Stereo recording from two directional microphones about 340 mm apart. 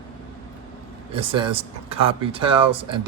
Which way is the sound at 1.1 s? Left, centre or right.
Centre.